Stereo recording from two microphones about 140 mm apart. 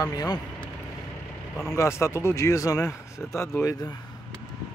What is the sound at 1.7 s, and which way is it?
Speech, 20° left (ahead or behind).